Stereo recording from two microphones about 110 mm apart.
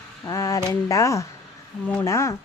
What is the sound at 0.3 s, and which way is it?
A woman's voice, 30° left (ahead or behind).